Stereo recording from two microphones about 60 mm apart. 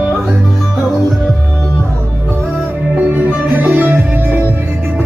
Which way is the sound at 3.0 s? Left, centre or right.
Right.